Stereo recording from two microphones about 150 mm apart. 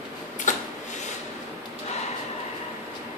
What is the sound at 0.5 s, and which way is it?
Printer, 55° left (ahead or behind).